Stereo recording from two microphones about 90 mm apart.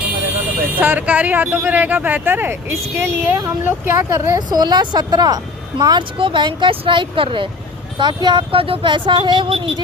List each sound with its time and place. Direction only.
0.8 s speech: 20° right (ahead or behind)
4.4 s a woman's voice: 50° right (ahead or behind)
6.0 s speech: 70° right (ahead or behind)
7.9 s speech: 60° right (ahead or behind)